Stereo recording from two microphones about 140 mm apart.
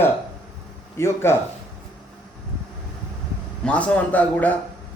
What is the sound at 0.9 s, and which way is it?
Speech, 20° left (ahead or behind).